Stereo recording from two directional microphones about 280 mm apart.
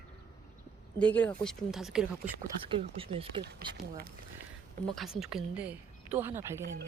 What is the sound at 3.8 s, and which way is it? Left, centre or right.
Speech, right.